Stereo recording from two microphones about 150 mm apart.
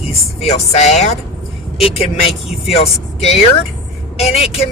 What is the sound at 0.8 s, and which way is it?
Speech, 50° left (ahead or behind).